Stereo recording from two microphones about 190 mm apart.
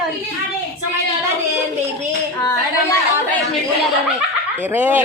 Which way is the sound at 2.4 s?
15° left (ahead or behind).